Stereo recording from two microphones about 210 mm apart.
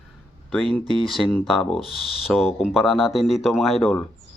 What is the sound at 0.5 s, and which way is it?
Speech, centre (ahead or behind).